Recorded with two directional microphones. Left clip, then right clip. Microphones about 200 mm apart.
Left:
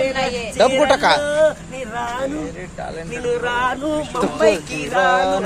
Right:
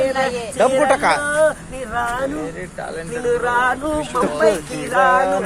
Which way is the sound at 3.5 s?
10° left (ahead or behind).